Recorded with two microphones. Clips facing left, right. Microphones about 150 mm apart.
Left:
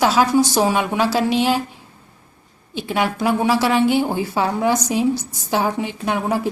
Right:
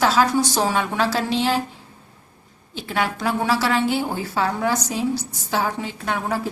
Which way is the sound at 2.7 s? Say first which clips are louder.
Left 3 dB; 15° left (ahead or behind).